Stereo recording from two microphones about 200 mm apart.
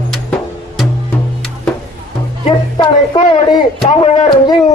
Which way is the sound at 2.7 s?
30° left (ahead or behind).